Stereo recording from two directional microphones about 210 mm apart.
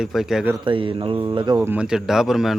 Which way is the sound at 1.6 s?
5° right (ahead or behind).